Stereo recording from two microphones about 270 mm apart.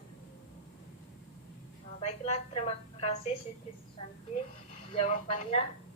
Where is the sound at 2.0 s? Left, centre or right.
Left.